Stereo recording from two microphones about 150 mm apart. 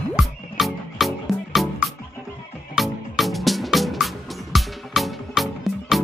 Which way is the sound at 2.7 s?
Centre (ahead or behind).